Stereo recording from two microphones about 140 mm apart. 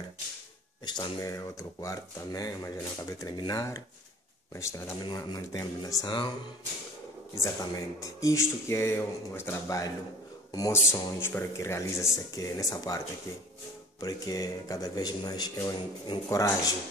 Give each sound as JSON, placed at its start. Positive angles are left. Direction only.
{"t": 0.8, "sound": "speech", "side_deg": 30}
{"t": 7.7, "sound": "speech", "side_deg": 25}